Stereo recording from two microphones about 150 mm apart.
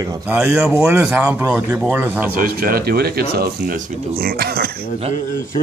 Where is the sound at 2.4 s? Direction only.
75° right (ahead or behind).